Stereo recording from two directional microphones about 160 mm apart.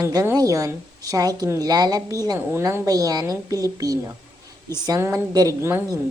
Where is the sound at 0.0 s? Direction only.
20° right (ahead or behind).